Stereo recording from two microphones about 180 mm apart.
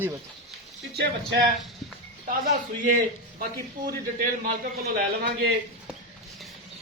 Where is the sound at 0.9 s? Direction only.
60° right (ahead or behind).